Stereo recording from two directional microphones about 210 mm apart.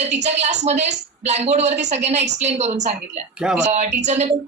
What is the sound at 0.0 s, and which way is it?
A woman's voice, 30° right (ahead or behind).